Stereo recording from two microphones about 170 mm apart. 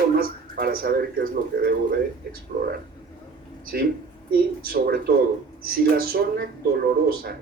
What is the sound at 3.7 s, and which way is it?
A man's voice, 65° right (ahead or behind).